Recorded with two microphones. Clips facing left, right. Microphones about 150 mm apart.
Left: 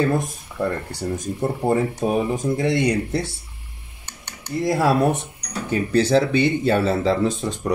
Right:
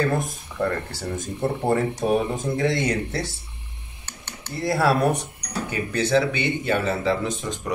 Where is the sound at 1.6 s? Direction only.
5° left (ahead or behind).